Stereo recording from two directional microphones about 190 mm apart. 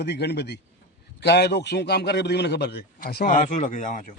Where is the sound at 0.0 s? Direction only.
60° left (ahead or behind); by 4.0 s 40° left (ahead or behind).